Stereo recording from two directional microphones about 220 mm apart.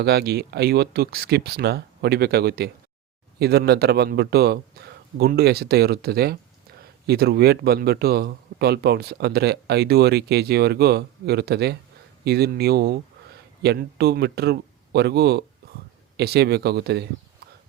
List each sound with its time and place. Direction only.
0.0 s speech: 45° right (ahead or behind)